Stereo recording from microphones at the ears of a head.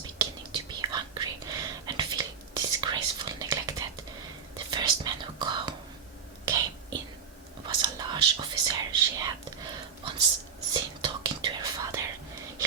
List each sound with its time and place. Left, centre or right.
0.2 s whispering: right